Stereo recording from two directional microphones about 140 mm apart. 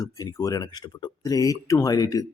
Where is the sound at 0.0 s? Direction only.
25° left (ahead or behind).